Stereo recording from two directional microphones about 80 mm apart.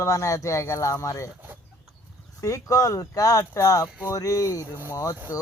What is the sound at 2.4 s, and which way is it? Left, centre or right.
Speech, left.